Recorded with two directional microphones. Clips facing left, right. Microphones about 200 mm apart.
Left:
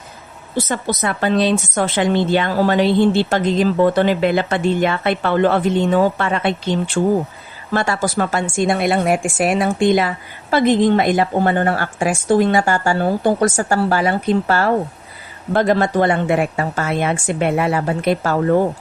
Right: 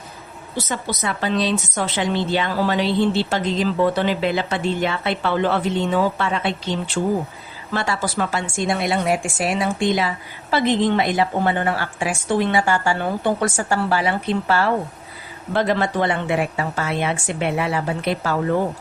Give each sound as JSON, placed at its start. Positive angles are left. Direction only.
{"t": 0.5, "sound": "a woman's voice", "side_deg": 50}